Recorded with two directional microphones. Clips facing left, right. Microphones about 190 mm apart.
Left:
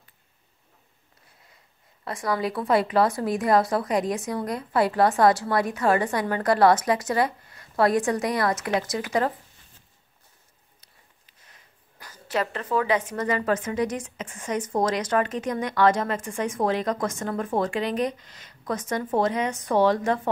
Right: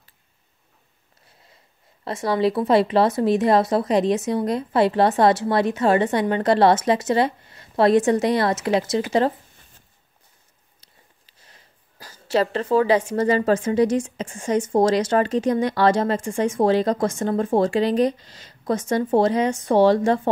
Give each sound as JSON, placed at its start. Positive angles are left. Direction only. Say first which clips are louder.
{"t": 2.0, "sound": "speech", "louder": "right 6 dB", "side_deg": -25}
{"t": 11.2, "sound": "speech", "louder": "right 3 dB", "side_deg": -30}